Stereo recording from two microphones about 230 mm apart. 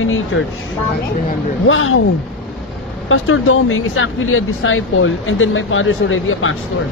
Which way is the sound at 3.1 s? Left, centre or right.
Left.